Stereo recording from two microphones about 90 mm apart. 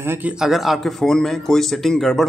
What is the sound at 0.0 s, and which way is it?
Speech, 25° right (ahead or behind).